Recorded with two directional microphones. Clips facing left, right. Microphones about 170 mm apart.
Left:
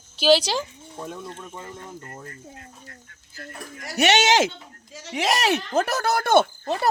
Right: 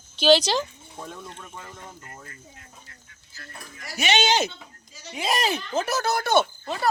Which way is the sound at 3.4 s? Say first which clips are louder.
Left 6 dB; 65° left (ahead or behind).